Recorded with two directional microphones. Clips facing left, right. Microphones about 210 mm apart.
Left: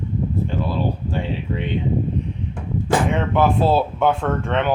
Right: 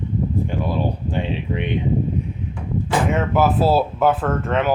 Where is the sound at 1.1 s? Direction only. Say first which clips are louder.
Right 1 dB; 20° right (ahead or behind).